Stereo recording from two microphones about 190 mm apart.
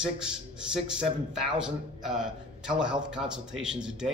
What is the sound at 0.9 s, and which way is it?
A man's voice, 5° right (ahead or behind).